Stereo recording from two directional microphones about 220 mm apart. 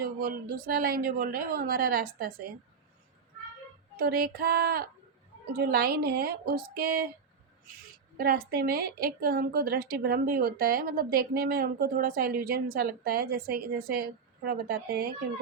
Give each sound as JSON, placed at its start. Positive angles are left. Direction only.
{"t": 0.0, "sound": "a woman's voice", "side_deg": -40}
{"t": 3.9, "sound": "a woman's voice", "side_deg": -45}
{"t": 8.2, "sound": "a woman's voice", "side_deg": -40}